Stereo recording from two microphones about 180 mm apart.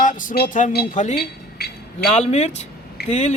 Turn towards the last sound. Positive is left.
turn(degrees=40)  # may be behind; listen again after turning